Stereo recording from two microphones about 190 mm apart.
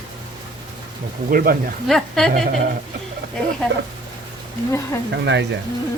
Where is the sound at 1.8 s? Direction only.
Centre (ahead or behind).